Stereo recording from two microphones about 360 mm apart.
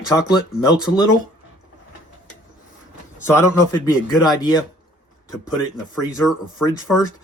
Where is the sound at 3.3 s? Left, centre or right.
Centre.